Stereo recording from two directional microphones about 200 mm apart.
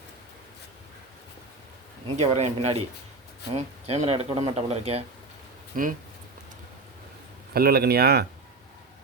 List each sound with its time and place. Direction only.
2.1 s speech: 35° right (ahead or behind)
7.5 s speech: 50° right (ahead or behind)